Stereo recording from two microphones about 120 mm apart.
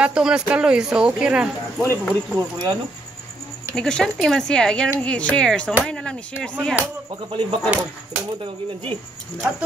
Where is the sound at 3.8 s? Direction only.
5° left (ahead or behind).